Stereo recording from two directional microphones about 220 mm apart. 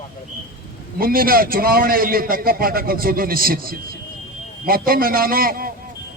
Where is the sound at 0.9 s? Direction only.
40° right (ahead or behind).